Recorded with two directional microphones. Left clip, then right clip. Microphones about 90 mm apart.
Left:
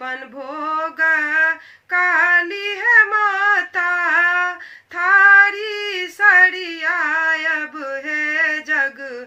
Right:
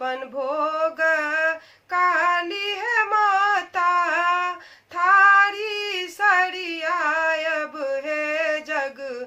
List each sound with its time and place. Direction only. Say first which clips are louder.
0.0 s female singing: right 2 dB; 30° right (ahead or behind)
4.9 s child singing: left 4 dB; 30° right (ahead or behind)